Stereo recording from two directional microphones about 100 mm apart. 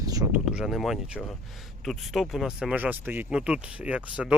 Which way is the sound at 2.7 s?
15° right (ahead or behind).